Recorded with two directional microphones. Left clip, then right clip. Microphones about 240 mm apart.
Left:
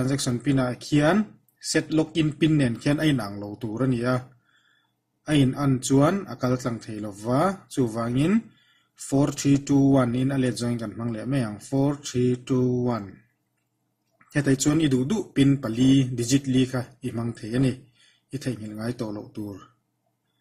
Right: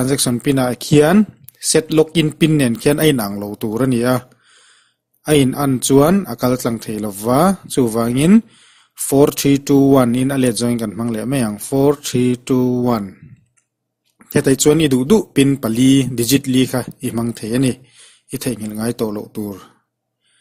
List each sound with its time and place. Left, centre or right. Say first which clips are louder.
0.0 s speech: right 9 dB; right
5.2 s speech: right 9 dB; right
14.5 s speech: right 9 dB; right